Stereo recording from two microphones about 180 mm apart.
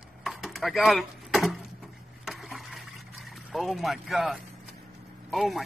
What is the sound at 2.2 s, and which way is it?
Trickle, centre (ahead or behind).